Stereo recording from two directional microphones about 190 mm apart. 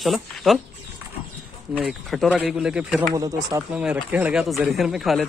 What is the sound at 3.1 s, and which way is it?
Speech, 20° right (ahead or behind).